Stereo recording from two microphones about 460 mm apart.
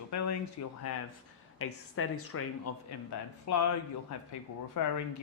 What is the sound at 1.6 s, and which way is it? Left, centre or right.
Speech, left.